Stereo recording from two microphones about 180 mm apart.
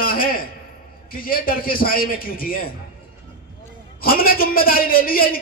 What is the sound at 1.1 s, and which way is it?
A man's voice, 50° left (ahead or behind).